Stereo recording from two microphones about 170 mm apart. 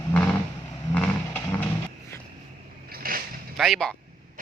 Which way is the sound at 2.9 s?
60° right (ahead or behind).